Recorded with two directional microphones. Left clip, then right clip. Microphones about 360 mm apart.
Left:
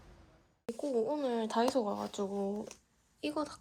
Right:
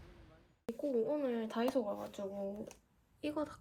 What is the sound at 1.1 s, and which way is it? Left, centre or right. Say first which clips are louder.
A woman's voice: left 4 dB; centre.